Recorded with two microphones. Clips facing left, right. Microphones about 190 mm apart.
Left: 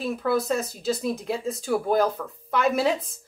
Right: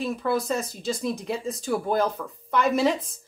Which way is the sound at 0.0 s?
Centre (ahead or behind).